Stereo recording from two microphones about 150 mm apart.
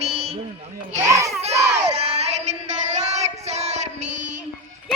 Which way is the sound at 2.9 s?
50° right (ahead or behind).